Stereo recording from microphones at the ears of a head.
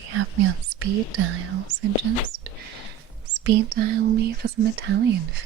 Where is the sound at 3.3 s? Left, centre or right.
Right.